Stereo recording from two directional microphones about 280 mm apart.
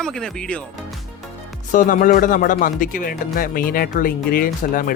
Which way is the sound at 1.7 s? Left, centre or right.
Left.